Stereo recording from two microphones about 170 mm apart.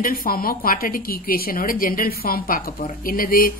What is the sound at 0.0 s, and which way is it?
A woman's voice, 55° left (ahead or behind).